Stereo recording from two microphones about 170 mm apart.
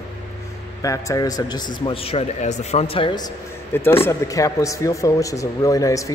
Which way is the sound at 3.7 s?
15° left (ahead or behind).